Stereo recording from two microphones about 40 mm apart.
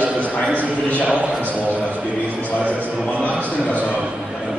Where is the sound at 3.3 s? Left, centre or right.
Right.